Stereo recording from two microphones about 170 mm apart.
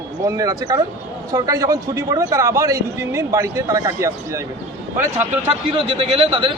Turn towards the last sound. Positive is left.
turn(degrees=-30)  # may be behind; listen again after turning